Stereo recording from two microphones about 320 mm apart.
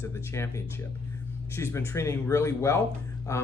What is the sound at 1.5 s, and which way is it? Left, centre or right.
Speech, centre.